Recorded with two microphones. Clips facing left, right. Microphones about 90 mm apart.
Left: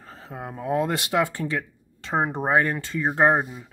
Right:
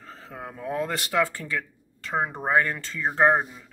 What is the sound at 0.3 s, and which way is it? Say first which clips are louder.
Speech: left 5 dB; 20° left (ahead or behind).